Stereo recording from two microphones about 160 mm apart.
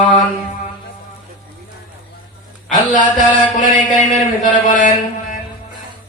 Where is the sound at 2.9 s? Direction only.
50° left (ahead or behind).